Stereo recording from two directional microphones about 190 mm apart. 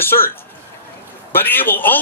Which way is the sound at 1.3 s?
10° left (ahead or behind).